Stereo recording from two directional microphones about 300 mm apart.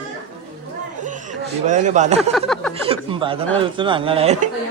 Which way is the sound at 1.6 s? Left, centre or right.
Right.